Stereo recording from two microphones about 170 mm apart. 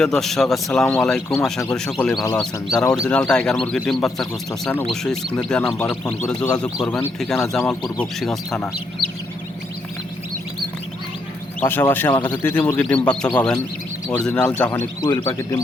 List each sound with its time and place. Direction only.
0.0 s a man's voice: centre (ahead or behind)
6.8 s a man's voice: 5° left (ahead or behind)
11.6 s speech: 15° left (ahead or behind)
14.3 s a man's voice: 5° left (ahead or behind)